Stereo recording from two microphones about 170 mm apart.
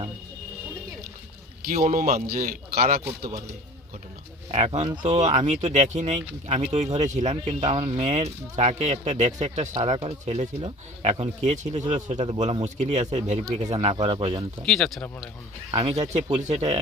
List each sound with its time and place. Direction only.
1.7 s speech: 45° right (ahead or behind)
2.2 s a man's voice: 60° right (ahead or behind)
4.5 s speech: 40° right (ahead or behind)
14.6 s speech: 5° left (ahead or behind)
15.7 s speech: 40° right (ahead or behind)